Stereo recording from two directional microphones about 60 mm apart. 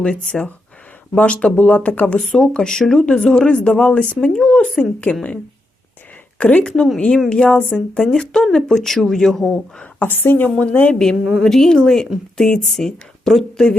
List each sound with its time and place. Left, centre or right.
0.0 s speech: centre
2.1 s speech: centre
6.4 s speech: left
9.8 s a woman's voice: left
11.3 s speech: centre